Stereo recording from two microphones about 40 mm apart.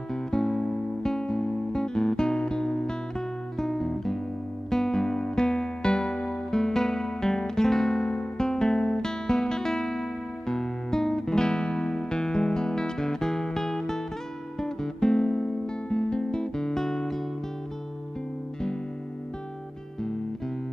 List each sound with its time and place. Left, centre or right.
0.1 s music: centre